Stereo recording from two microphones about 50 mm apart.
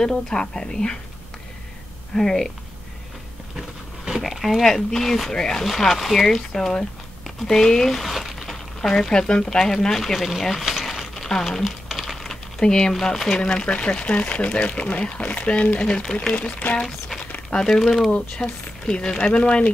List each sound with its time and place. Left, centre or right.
0.0 s speech: centre
2.1 s speech: centre
3.5 s dog: centre
4.6 s speech: centre
7.4 s a sound: centre
9.1 s speech: centre
11.6 s typing: centre
12.9 s speech: centre
13.4 s speech: centre
16.3 s speech: left
17.2 s a sound: left
17.6 s speech: centre
18.1 s speech: left